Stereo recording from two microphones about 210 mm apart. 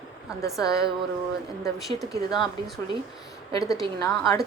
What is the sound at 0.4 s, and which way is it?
Speech, 15° left (ahead or behind).